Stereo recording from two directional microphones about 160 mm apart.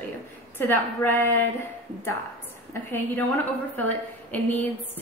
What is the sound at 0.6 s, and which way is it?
Speech, 15° left (ahead or behind).